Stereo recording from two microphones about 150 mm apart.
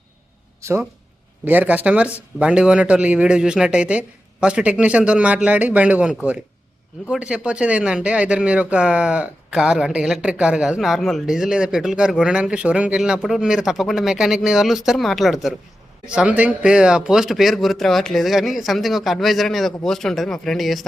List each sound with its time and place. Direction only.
0.6 s speech: 20° right (ahead or behind); by 20.8 s centre (ahead or behind)